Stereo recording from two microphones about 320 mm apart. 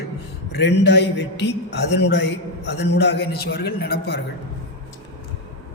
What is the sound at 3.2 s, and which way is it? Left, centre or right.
Speech, left.